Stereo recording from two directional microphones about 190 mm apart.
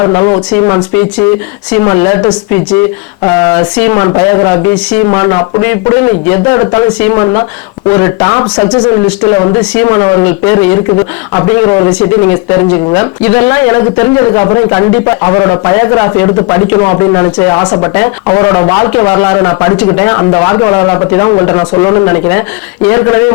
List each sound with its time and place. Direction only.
0.0 s speech: 20° left (ahead or behind)